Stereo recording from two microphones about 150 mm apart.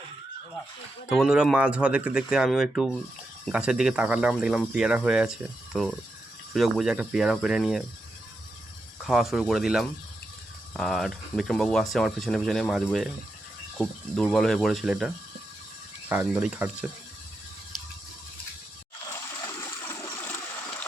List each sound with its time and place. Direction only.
1.1 s speech: 5° right (ahead or behind)
9.0 s speech: 5° right (ahead or behind)
19.0 s water: 25° left (ahead or behind)